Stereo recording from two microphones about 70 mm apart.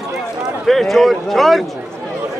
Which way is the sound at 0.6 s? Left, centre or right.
Centre.